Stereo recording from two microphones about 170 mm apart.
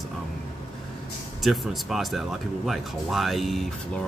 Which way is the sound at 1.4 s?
Centre (ahead or behind).